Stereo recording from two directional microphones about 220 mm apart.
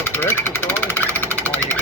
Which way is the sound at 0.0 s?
10° left (ahead or behind).